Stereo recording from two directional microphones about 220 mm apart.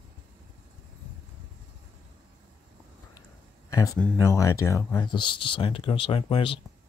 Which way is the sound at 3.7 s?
15° left (ahead or behind).